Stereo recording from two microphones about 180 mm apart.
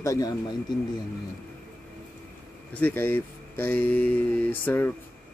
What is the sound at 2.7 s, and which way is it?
Speech, 10° left (ahead or behind).